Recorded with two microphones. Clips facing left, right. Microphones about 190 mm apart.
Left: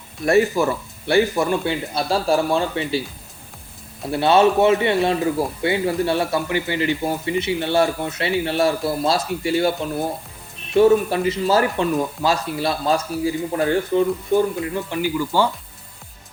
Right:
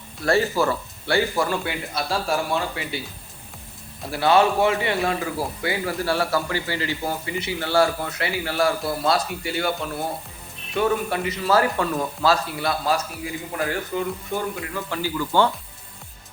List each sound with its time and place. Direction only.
0.3 s a man's voice: 20° left (ahead or behind)
4.1 s a man's voice: 25° left (ahead or behind)
14.6 s speech: 15° left (ahead or behind)